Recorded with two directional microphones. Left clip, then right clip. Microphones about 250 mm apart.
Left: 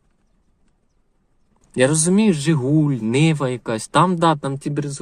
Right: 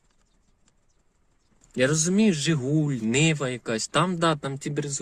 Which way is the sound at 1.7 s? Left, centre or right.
Left.